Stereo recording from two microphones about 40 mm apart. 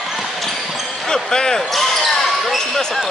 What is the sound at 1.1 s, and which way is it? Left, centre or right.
Basketball bounce, centre.